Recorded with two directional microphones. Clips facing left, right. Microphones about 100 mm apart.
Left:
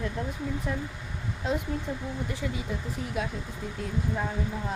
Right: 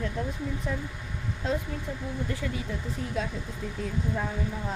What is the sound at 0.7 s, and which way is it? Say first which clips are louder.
Speech: even; centre (ahead or behind).